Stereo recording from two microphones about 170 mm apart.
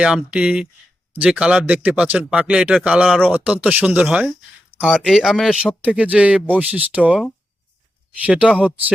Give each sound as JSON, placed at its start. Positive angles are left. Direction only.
{"t": 0.0, "sound": "speech", "side_deg": -5}